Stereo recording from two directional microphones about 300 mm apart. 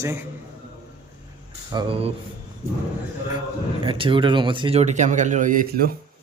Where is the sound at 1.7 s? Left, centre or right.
Centre.